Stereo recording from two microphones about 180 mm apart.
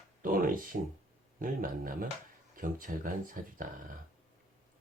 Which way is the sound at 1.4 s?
50° right (ahead or behind).